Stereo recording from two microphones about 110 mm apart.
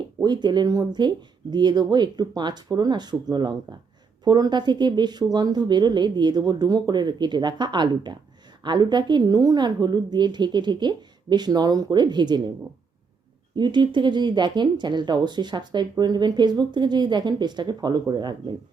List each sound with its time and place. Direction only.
0.2 s speech: 40° right (ahead or behind)
13.6 s speech: 45° right (ahead or behind)